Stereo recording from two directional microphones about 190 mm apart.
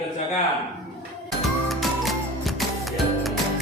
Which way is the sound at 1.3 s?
Centre (ahead or behind).